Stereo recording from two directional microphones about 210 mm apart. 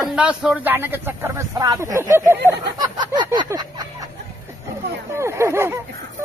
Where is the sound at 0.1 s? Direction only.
5° right (ahead or behind).